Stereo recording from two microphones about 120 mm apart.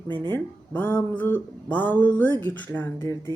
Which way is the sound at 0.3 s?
15° left (ahead or behind).